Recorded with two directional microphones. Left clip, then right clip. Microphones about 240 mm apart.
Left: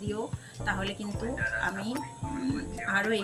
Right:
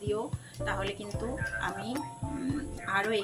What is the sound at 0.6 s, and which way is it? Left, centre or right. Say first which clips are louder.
Speech: left 1 dB; centre.